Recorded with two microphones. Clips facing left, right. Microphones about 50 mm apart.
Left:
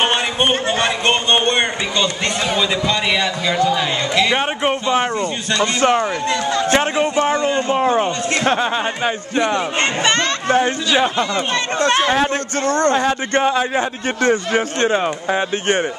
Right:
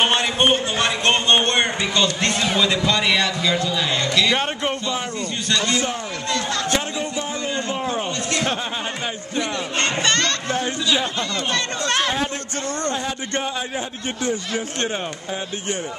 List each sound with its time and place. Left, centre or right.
0.1 s a man's voice: centre
3.6 s speech: left
5.8 s a man's voice: left
6.7 s a man's voice: left
9.8 s speech: left
10.5 s speech: left
12.6 s speech: left
13.0 s speech: left
14.3 s a man's voice: left